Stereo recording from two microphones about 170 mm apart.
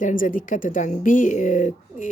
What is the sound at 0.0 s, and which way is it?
Speech, 50° left (ahead or behind).